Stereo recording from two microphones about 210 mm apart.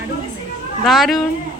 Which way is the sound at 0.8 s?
Centre (ahead or behind).